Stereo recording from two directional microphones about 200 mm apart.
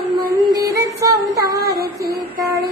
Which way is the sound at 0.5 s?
15° right (ahead or behind).